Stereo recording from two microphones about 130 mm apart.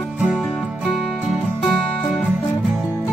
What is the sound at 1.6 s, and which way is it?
Music, centre (ahead or behind).